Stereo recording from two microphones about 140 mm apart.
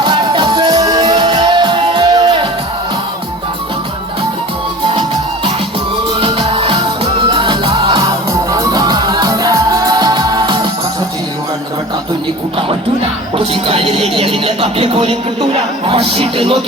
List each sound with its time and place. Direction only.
0.0 s music: 35° right (ahead or behind)
6.1 s music: 40° right (ahead or behind)
8.3 s music: 25° right (ahead or behind)
13.3 s a sound: 40° right (ahead or behind)
15.9 s speech: 40° right (ahead or behind)